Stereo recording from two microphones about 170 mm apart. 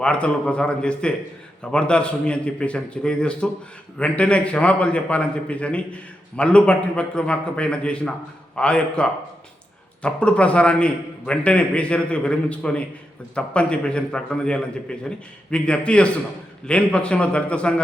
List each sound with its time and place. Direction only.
0.0 s a man's voice: 5° left (ahead or behind)